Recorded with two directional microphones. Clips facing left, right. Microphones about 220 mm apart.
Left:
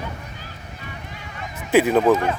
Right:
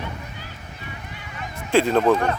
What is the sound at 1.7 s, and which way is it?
Speech, 5° left (ahead or behind).